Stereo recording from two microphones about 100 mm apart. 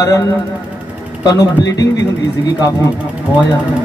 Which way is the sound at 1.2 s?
40° left (ahead or behind).